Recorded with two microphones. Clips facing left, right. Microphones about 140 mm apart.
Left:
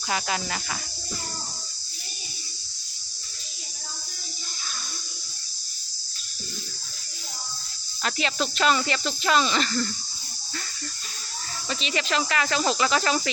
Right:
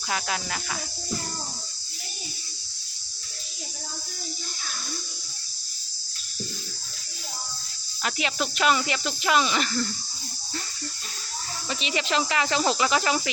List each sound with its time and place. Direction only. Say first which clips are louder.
0.1 s speech: left 2 dB; centre (ahead or behind)
8.0 s speech: left 1 dB; 10° right (ahead or behind)
11.7 s speech: even; 15° right (ahead or behind)